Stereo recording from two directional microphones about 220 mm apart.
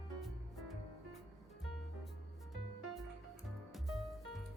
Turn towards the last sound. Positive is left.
turn(degrees=0)  # may be behind; listen again after turning